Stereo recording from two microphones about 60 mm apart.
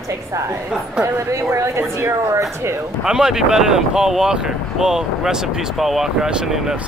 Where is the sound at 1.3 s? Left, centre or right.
Right.